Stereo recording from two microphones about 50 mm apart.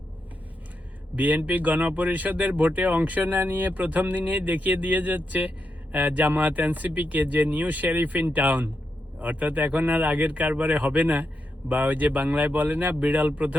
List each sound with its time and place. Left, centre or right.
1.1 s speech: right